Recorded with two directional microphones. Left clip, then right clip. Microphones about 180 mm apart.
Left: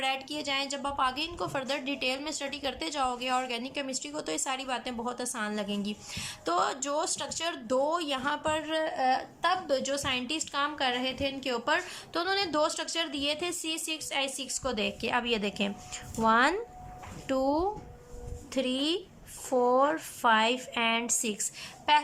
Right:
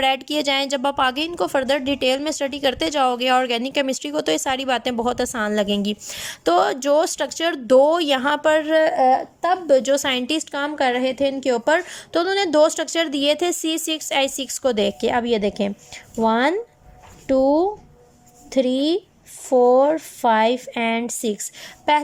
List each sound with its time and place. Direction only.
0.0 s a woman's voice: 50° right (ahead or behind); by 21.7 s 30° right (ahead or behind)